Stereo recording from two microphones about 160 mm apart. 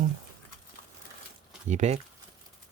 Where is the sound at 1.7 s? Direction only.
45° right (ahead or behind).